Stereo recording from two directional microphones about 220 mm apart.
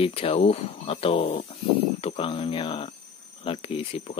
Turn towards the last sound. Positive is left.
turn(degrees=25)  # may be behind; listen again after turning